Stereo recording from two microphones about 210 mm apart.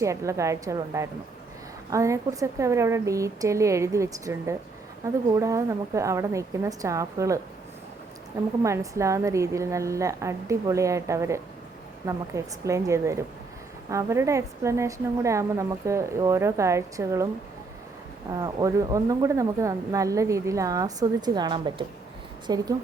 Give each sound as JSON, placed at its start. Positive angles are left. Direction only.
{"t": 0.0, "sound": "speech", "side_deg": -15}
{"t": 8.6, "sound": "speech", "side_deg": -15}
{"t": 18.3, "sound": "speech", "side_deg": -15}